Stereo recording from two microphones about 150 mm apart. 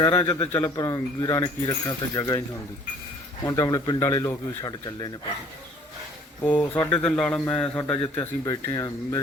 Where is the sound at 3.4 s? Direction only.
20° left (ahead or behind).